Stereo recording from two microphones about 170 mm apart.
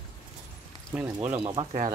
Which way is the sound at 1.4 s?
35° right (ahead or behind).